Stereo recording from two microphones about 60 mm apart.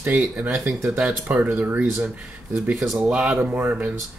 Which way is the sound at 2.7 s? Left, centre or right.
Centre.